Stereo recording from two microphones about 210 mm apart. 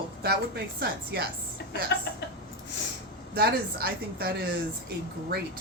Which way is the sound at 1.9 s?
55° left (ahead or behind).